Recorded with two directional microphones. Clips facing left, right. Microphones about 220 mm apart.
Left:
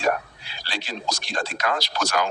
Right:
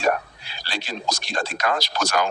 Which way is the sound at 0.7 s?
45° right (ahead or behind).